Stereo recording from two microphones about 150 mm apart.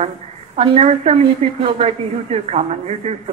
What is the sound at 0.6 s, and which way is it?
A woman's voice, 45° right (ahead or behind).